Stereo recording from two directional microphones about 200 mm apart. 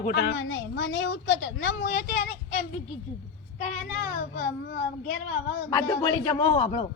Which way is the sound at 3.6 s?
40° left (ahead or behind).